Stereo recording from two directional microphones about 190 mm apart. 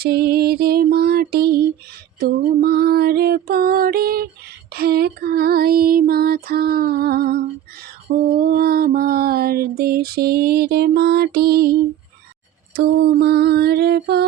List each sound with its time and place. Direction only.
0.0 s music: 55° right (ahead or behind)
2.1 s mantra: 55° right (ahead or behind)
12.7 s music: 55° right (ahead or behind)